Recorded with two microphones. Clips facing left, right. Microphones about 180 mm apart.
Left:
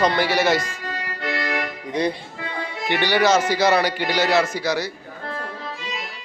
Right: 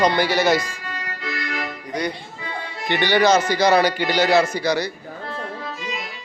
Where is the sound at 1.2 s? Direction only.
65° left (ahead or behind).